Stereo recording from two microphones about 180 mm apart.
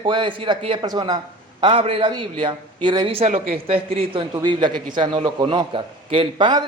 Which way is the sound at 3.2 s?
45° right (ahead or behind).